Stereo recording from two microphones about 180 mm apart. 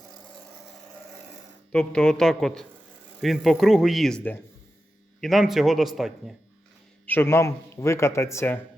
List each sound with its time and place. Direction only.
1.7 s speech: 5° left (ahead or behind)
7.0 s speech: 10° left (ahead or behind)